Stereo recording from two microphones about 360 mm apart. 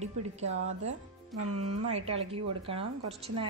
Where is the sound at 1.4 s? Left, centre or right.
Right.